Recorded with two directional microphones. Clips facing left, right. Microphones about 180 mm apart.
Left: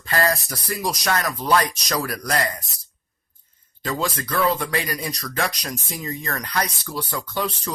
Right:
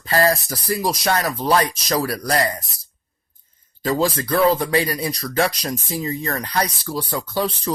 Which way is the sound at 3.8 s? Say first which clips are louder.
Right 6 dB; 35° right (ahead or behind).